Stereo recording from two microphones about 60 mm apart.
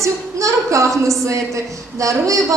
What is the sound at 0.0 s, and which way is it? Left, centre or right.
Speech, right.